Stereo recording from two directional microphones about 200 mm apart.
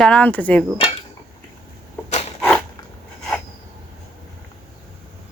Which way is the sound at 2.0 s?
30° left (ahead or behind).